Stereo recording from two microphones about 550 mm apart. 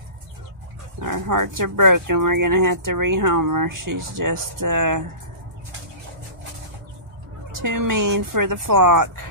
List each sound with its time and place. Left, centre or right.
1.0 s speech: right
7.6 s speech: right